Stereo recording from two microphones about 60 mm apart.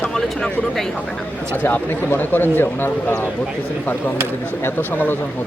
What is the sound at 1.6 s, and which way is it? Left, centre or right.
A man's voice, left.